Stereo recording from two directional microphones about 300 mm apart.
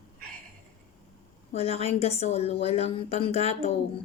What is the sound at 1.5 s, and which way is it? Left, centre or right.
A woman's voice, left.